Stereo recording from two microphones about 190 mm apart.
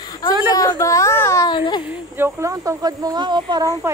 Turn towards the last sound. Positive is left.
turn(degrees=-20)  # may be behind; listen again after turning